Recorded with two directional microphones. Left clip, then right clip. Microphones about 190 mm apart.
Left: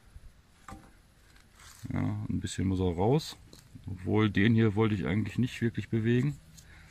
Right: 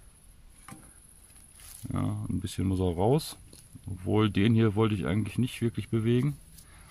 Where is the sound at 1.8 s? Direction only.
15° right (ahead or behind).